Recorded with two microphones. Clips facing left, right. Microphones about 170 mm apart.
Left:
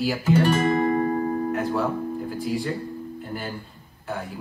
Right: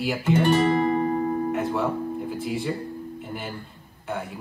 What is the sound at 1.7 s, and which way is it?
Speech, centre (ahead or behind).